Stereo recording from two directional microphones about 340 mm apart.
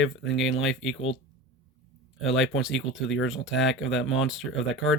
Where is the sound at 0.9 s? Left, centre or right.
Left.